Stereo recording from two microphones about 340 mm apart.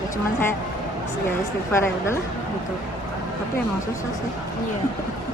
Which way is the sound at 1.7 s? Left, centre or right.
Centre.